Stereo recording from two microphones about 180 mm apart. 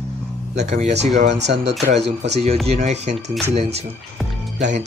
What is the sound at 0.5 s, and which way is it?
Speech, 40° right (ahead or behind).